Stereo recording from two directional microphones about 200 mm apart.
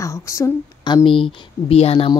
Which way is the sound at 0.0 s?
15° left (ahead or behind).